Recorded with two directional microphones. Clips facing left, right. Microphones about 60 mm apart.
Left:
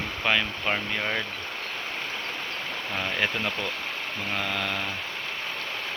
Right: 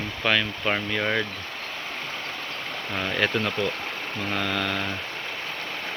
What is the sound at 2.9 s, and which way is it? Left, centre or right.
Speech, centre.